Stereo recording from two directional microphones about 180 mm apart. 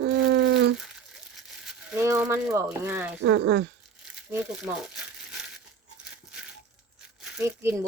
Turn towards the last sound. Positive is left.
turn(degrees=-15)  # may be behind; listen again after turning